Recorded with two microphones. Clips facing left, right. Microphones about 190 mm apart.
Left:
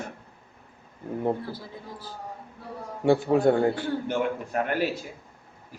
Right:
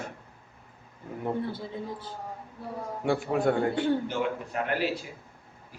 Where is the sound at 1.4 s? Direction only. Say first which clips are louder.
Right 4 dB; 25° right (ahead or behind).